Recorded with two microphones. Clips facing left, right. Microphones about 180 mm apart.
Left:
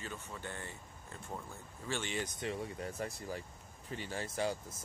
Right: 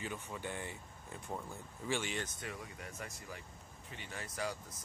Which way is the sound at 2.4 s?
30° left (ahead or behind).